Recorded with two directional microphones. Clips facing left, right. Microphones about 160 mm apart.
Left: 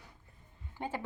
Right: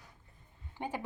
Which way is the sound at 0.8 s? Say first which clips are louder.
Even; 15° right (ahead or behind).